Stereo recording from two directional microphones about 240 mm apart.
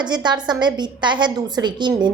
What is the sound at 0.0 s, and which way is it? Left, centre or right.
A woman's voice, centre.